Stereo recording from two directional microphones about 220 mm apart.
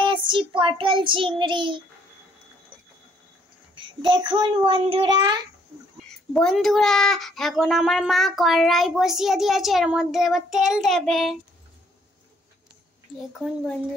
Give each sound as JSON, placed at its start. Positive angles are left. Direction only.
{"t": 0.0, "sound": "child singing", "side_deg": -20}
{"t": 3.7, "sound": "a child's voice", "side_deg": -20}
{"t": 6.3, "sound": "a child's voice", "side_deg": 0}